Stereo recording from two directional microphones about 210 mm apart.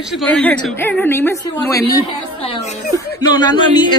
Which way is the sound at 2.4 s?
30° left (ahead or behind).